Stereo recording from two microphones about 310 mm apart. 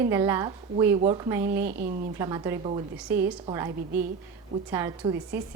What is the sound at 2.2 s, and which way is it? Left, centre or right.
A woman's voice, centre.